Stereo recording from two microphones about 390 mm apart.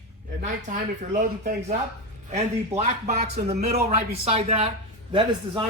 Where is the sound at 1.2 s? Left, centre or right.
Centre.